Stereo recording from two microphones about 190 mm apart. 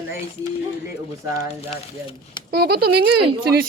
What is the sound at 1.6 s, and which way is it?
Speech, 30° left (ahead or behind).